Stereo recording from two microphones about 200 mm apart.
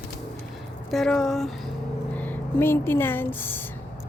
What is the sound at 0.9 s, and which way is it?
Speech, centre (ahead or behind).